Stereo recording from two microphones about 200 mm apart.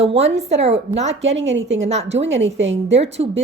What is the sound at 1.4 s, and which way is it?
Speech, 65° right (ahead or behind).